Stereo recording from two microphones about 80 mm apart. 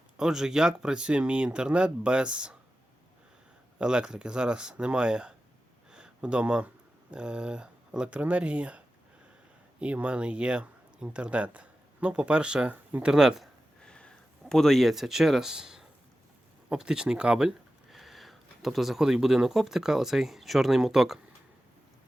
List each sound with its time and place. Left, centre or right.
0.2 s speech: centre
3.8 s speech: centre
5.9 s a sound: centre
7.1 s speech: centre
9.8 s speech: centre
13.1 s speech: centre
13.8 s a sound: centre
14.5 s speech: centre